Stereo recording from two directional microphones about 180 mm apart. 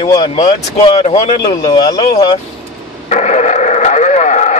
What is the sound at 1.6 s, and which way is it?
Speech, 20° left (ahead or behind).